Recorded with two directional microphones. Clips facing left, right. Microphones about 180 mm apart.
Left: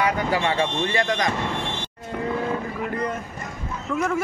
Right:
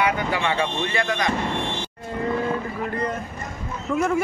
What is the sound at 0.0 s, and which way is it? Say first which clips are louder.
Speech: left 1 dB; 40° left (ahead or behind).